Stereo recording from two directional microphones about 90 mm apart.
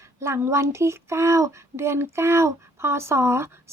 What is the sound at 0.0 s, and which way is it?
Speech, 30° right (ahead or behind).